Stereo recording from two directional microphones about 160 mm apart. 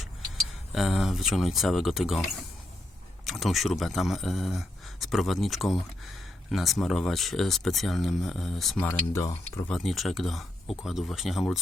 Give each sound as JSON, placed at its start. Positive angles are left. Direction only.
{"t": 0.7, "sound": "speech", "side_deg": 0}
{"t": 8.8, "sound": "speech", "side_deg": 15}